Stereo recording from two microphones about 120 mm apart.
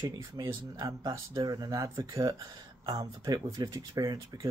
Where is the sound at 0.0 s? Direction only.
30° right (ahead or behind).